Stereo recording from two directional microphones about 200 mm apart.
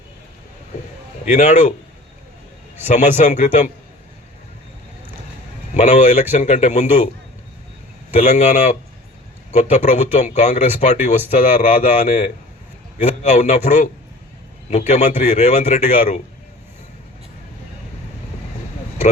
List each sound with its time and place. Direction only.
1.2 s a man's voice: 35° left (ahead or behind)
2.8 s a man's voice: 35° left (ahead or behind)
5.7 s a man's voice: 35° left (ahead or behind)
8.1 s a man's voice: 35° left (ahead or behind)